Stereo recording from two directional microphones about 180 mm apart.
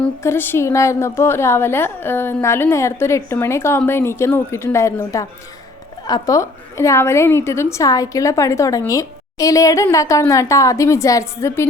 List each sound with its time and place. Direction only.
0.0 s a woman's voice: 15° left (ahead or behind)